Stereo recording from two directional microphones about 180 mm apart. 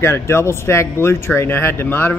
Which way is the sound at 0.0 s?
15° left (ahead or behind).